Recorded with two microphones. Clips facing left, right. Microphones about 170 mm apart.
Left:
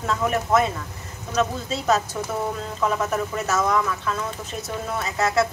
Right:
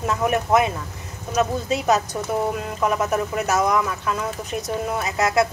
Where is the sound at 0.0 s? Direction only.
15° right (ahead or behind).